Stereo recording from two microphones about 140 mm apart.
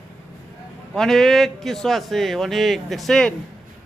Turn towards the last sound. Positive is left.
turn(degrees=5)  # may be behind; listen again after turning